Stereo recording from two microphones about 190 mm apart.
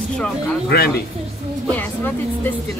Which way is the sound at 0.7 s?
55° left (ahead or behind).